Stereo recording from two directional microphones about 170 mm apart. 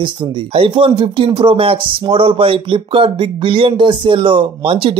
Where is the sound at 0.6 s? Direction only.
30° right (ahead or behind).